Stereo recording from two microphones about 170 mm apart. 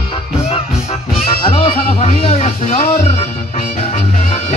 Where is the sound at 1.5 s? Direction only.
40° left (ahead or behind).